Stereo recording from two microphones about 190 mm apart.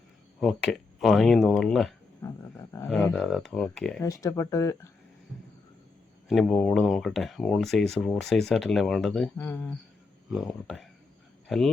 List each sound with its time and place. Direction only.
0.3 s speech: centre (ahead or behind)
2.2 s speech: 15° left (ahead or behind)
4.0 s speech: 15° left (ahead or behind)
6.2 s speech: 5° left (ahead or behind)
10.3 s speech: centre (ahead or behind)